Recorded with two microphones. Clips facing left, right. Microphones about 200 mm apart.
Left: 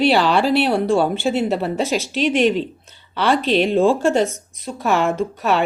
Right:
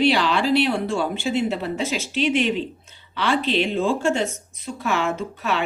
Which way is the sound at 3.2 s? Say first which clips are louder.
Left 4 dB; 50° left (ahead or behind).